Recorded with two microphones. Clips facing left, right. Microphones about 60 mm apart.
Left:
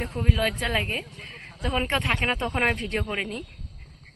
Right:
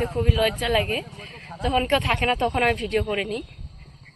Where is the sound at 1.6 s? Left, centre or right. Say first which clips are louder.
Right 4 dB; left.